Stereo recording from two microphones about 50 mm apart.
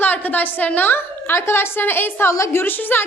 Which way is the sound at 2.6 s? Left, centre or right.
Left.